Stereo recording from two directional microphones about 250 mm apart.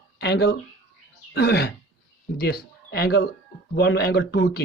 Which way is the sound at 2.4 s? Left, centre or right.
Left.